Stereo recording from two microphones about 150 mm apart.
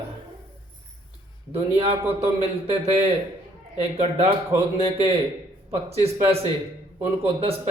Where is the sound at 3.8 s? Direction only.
40° right (ahead or behind).